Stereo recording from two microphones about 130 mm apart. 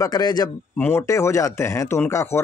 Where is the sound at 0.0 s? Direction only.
30° left (ahead or behind).